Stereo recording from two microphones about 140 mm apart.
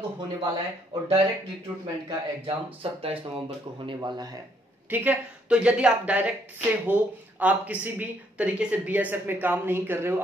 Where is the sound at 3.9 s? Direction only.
30° right (ahead or behind).